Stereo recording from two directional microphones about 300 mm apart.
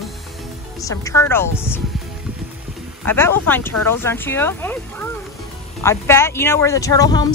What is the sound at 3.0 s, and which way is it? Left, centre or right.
Speech, centre.